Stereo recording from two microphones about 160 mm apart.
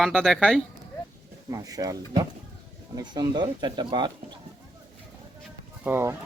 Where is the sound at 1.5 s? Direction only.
20° right (ahead or behind).